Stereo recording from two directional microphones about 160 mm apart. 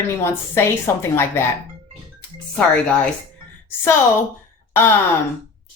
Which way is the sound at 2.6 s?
5° left (ahead or behind).